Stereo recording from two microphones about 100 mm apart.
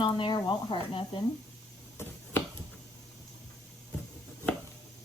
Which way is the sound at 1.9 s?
20° left (ahead or behind).